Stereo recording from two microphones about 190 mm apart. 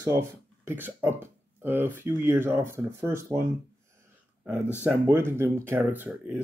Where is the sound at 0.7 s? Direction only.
10° right (ahead or behind).